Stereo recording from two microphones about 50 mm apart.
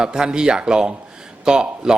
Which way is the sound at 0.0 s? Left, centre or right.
Centre.